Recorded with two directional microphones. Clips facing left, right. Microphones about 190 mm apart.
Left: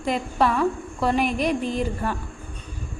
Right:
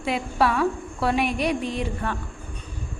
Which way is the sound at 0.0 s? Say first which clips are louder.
Left 1 dB; 5° right (ahead or behind).